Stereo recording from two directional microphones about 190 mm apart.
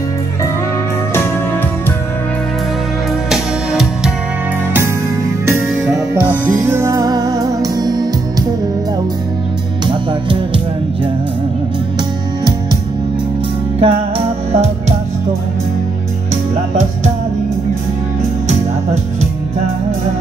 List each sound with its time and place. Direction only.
3.3 s music: 5° right (ahead or behind)
6.6 s music: 15° right (ahead or behind)
9.8 s music: 25° right (ahead or behind)
13.7 s music: 30° right (ahead or behind)